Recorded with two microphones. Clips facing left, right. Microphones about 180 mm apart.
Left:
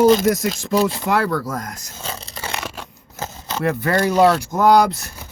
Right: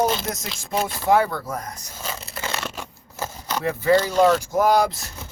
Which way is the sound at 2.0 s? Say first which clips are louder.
Even; 30° left (ahead or behind).